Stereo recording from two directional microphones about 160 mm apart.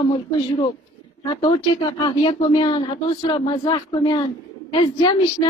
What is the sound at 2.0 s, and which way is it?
A woman's voice, 30° left (ahead or behind).